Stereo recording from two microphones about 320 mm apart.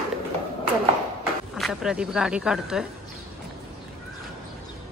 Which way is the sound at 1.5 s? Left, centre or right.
Centre.